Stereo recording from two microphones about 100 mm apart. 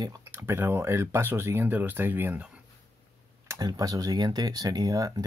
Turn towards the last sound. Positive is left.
turn(degrees=-35)  # may be behind; listen again after turning